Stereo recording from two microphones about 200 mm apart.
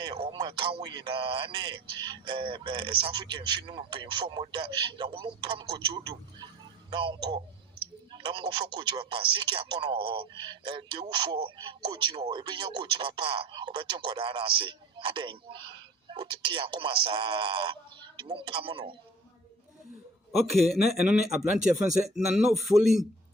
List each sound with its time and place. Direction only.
0.0 s speech: 25° right (ahead or behind)
20.3 s speech: centre (ahead or behind)